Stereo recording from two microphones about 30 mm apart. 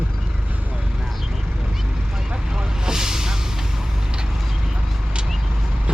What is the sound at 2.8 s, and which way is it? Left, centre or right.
Vehicle, centre.